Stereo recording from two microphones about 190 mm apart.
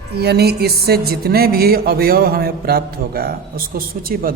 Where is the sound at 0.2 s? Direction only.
60° right (ahead or behind).